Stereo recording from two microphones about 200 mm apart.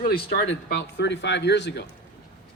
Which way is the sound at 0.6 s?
55° left (ahead or behind).